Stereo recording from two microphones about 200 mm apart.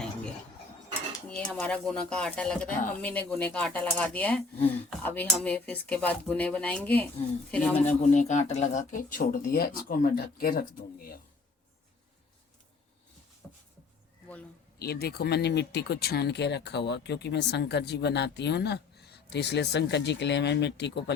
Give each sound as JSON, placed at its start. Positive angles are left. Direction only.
{"t": 1.3, "sound": "speech", "side_deg": 5}
{"t": 8.1, "sound": "speech", "side_deg": 35}
{"t": 14.8, "sound": "speech", "side_deg": 50}